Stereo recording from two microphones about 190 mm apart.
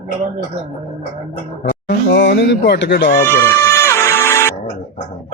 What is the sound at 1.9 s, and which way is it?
Speech, 65° left (ahead or behind).